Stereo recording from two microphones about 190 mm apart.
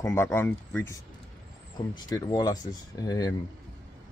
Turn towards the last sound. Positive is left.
turn(degrees=20)  # may be behind; listen again after turning